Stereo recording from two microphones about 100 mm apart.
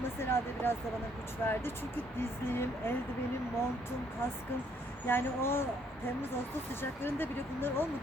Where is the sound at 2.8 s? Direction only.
20° left (ahead or behind).